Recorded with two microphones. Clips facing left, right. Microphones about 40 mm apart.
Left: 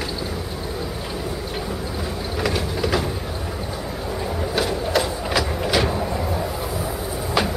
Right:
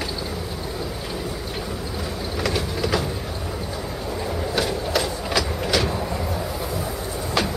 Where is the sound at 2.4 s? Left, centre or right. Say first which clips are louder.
Left 1 dB; centre.